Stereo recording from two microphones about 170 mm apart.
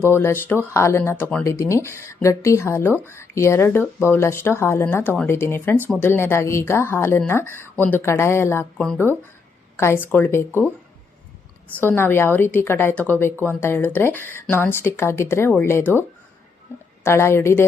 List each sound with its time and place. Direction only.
0.1 s speech: 15° left (ahead or behind)
8.8 s speech: 5° left (ahead or behind)
9.7 s speech: 15° left (ahead or behind)
11.8 s speech: 10° left (ahead or behind)